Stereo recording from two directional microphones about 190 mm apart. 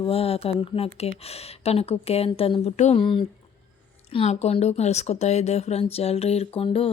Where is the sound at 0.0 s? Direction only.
30° left (ahead or behind).